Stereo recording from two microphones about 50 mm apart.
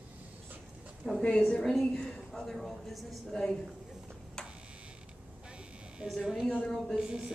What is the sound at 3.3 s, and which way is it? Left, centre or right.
Speech, centre.